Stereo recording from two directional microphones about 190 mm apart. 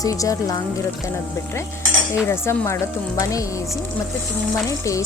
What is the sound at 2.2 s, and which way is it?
Speech, 15° left (ahead or behind).